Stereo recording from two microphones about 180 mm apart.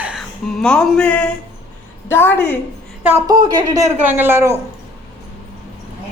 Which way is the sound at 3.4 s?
20° right (ahead or behind).